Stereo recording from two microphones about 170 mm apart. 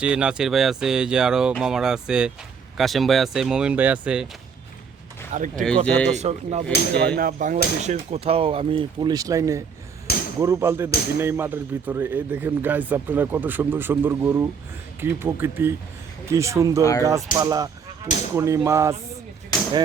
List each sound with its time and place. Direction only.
0.0 s speech: 5° right (ahead or behind)
5.3 s speech: 50° right (ahead or behind)
5.6 s speech: 5° left (ahead or behind)
6.1 s speech: 40° right (ahead or behind)
7.2 s speech: 55° right (ahead or behind); by 9.6 s 20° right (ahead or behind)
10.1 s a sound: 65° left (ahead or behind)
10.4 s speech: 15° right (ahead or behind)